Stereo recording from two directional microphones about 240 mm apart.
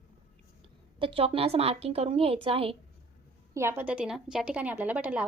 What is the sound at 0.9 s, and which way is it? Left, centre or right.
A woman's voice, right.